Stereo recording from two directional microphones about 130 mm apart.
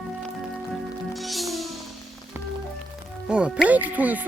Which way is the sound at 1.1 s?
Centre (ahead or behind).